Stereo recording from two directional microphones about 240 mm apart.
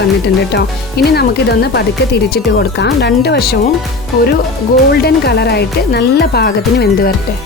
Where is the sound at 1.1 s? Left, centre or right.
Left.